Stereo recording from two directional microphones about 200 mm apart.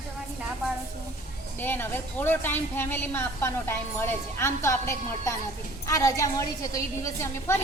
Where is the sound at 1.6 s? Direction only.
10° left (ahead or behind).